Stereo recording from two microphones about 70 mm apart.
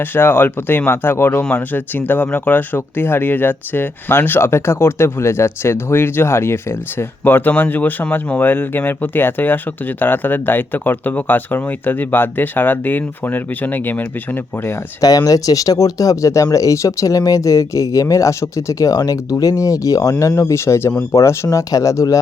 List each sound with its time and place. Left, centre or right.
0.0 s speech: left
15.0 s speech: left